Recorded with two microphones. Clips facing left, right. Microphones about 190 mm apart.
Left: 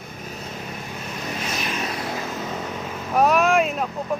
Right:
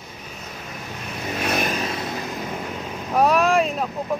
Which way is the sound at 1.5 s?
55° right (ahead or behind).